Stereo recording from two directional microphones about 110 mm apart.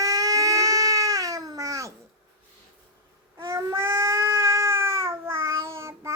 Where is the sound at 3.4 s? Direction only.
25° right (ahead or behind).